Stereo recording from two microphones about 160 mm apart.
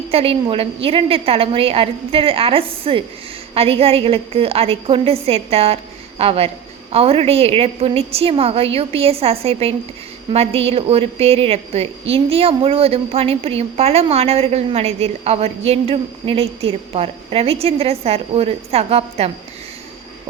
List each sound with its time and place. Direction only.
0.1 s a woman's voice: 35° right (ahead or behind)